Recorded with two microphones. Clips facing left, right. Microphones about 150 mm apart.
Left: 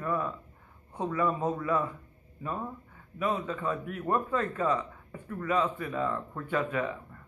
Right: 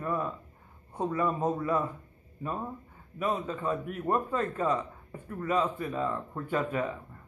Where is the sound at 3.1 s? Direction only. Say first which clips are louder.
Even; 30° right (ahead or behind).